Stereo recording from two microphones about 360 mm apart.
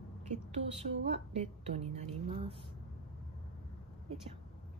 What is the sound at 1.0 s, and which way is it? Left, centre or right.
A woman's voice, centre.